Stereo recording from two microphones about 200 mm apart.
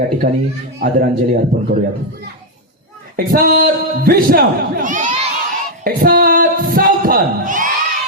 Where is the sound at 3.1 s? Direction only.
45° right (ahead or behind).